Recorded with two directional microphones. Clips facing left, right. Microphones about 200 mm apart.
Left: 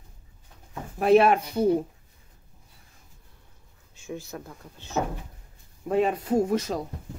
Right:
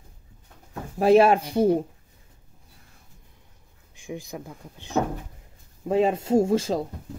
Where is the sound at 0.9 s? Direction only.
30° right (ahead or behind).